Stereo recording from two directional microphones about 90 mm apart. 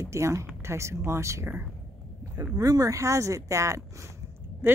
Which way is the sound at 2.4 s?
40° right (ahead or behind).